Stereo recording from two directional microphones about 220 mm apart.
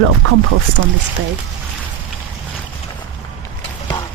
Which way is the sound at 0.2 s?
65° right (ahead or behind).